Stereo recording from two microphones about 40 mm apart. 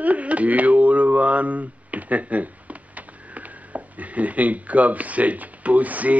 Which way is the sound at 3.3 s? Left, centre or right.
Right.